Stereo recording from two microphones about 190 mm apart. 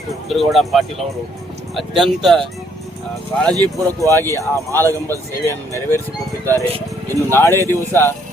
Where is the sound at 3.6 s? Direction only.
15° right (ahead or behind).